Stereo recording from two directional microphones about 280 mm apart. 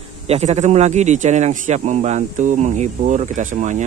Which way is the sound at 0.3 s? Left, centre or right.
Right.